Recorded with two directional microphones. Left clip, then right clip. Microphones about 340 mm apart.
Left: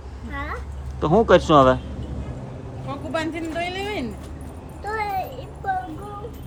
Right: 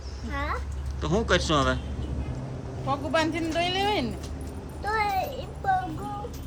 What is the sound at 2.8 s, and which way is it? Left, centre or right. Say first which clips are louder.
Speech: right 2 dB; centre.